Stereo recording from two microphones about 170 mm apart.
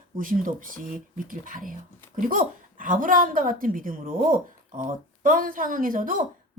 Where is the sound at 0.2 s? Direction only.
55° right (ahead or behind).